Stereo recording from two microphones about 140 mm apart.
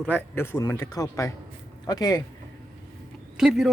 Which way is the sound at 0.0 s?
10° left (ahead or behind).